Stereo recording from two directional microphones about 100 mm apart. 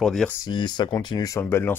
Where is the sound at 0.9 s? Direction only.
35° left (ahead or behind).